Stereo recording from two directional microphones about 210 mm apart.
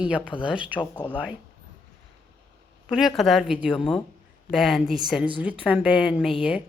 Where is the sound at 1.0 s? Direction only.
5° left (ahead or behind).